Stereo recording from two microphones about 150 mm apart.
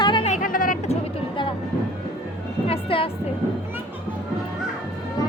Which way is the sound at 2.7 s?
40° left (ahead or behind).